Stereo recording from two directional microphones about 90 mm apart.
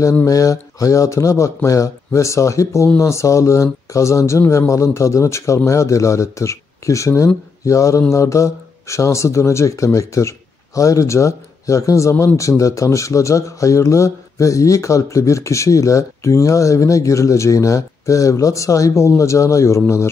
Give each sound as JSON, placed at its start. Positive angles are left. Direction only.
{"t": 0.3, "sound": "speech", "side_deg": 40}